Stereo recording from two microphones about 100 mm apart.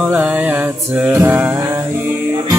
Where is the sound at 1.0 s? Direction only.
20° right (ahead or behind).